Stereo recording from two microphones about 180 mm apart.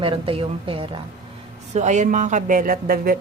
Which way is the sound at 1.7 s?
40° right (ahead or behind).